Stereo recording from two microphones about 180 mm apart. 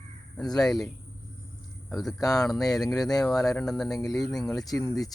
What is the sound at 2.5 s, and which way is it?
Speech, centre (ahead or behind).